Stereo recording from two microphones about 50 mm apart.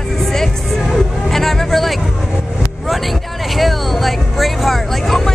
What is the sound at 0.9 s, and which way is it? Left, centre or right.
Hubbub, centre.